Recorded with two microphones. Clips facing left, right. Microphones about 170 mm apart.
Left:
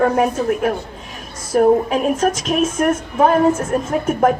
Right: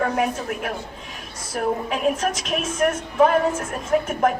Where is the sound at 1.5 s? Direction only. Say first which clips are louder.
Left 11 dB; 45° left (ahead or behind).